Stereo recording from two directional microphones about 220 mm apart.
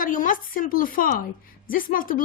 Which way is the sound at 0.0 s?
40° left (ahead or behind).